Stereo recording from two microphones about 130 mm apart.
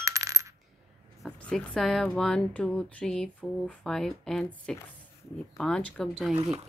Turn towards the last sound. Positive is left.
turn(degrees=5)  # may be behind; listen again after turning